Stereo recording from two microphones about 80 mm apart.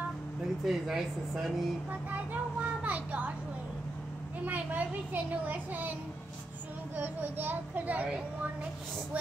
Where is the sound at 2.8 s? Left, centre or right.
Centre.